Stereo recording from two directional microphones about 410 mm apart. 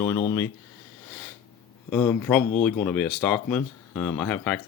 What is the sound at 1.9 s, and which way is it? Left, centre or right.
Speech, centre.